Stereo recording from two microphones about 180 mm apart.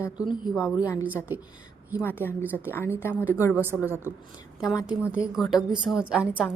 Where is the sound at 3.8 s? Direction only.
15° right (ahead or behind).